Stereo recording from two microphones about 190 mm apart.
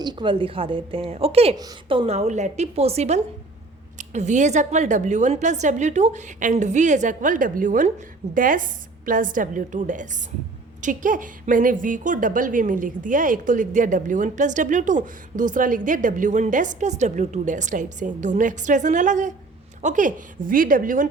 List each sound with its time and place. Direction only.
0.0 s a woman's voice: 25° right (ahead or behind); by 21.1 s 45° right (ahead or behind)